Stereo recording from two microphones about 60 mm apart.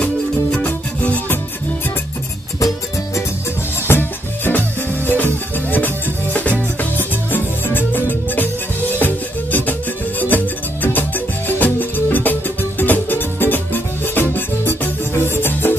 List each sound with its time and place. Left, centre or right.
0.7 s music: left
3.8 s music: left